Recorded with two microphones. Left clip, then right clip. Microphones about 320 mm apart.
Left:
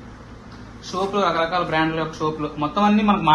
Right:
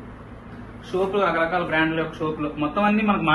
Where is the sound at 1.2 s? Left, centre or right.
Left.